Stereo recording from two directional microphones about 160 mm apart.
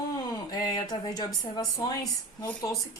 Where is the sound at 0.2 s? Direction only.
25° left (ahead or behind).